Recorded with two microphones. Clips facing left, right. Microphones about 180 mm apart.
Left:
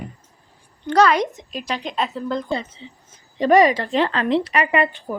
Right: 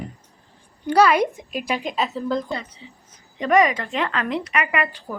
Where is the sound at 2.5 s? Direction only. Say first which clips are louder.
Left 4 dB; 25° left (ahead or behind).